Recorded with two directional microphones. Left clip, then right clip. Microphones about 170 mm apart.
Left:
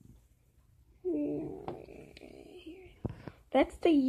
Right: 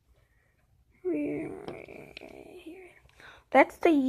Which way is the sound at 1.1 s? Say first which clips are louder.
Right 3 dB; 80° right.